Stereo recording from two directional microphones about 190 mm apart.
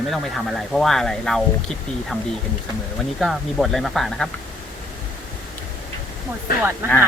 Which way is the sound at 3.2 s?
Centre (ahead or behind).